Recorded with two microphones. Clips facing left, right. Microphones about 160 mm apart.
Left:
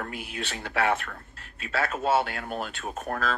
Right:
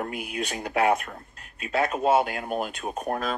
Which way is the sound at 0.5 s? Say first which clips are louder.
Right 3 dB; 15° right (ahead or behind).